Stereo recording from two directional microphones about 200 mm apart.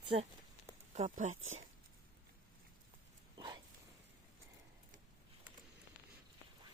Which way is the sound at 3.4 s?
20° right (ahead or behind).